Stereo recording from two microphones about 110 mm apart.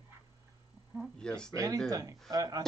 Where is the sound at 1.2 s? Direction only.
5° left (ahead or behind).